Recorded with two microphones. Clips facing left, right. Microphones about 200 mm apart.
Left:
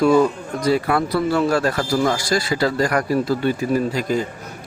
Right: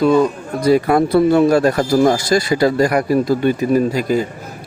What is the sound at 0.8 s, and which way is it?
Speech, 30° right (ahead or behind).